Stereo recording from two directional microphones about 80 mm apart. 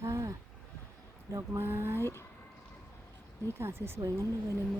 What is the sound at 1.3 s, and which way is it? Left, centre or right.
Speech, right.